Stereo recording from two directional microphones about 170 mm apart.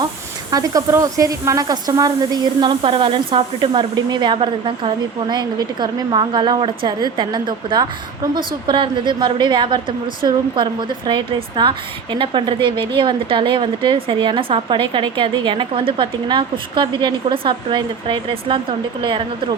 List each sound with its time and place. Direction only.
0.5 s a woman's voice: 20° right (ahead or behind)